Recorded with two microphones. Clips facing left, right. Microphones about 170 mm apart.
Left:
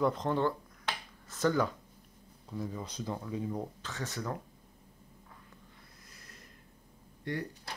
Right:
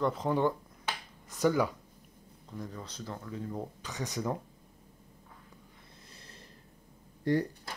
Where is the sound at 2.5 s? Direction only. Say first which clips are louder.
Left 3 dB; 10° left (ahead or behind).